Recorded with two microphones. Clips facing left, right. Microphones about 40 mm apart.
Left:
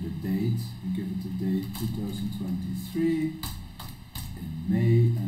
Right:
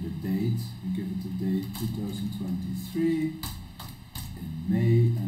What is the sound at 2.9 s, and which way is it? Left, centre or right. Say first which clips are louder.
Speech: even; centre.